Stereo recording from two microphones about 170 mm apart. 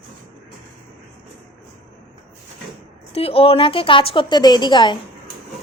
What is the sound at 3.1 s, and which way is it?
A woman's voice, 35° left (ahead or behind).